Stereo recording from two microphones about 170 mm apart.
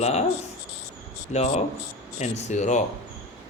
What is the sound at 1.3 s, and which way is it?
Speech, 40° left (ahead or behind).